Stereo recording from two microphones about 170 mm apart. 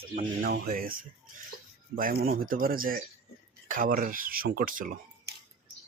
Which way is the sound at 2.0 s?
60° right (ahead or behind).